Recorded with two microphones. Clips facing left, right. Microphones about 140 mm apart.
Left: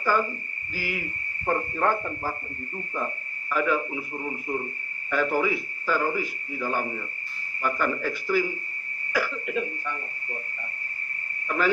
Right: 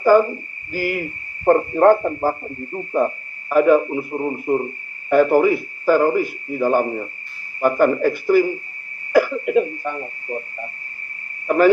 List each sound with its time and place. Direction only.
0.0 s a man's voice: 50° right (ahead or behind)